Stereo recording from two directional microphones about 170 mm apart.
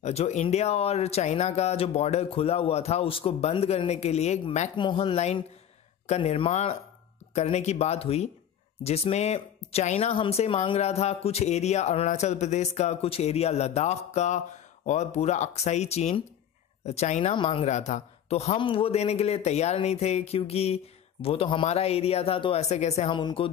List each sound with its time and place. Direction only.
0.0 s speech: 40° left (ahead or behind)
4.7 s speech: 30° left (ahead or behind)